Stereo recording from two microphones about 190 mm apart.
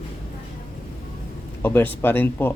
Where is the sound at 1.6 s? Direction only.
10° left (ahead or behind).